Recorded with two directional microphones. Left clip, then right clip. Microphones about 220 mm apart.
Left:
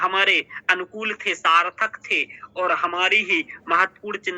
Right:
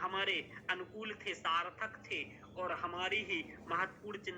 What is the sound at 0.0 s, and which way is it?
A man's voice, 40° left (ahead or behind).